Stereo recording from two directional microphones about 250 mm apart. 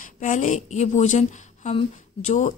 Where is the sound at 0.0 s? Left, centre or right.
Left.